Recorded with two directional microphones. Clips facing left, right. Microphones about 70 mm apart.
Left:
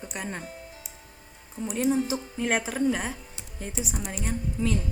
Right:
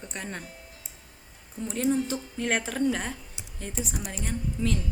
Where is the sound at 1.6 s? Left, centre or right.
Centre.